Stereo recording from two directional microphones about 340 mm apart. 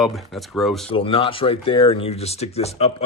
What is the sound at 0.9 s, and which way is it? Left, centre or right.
Speech, centre.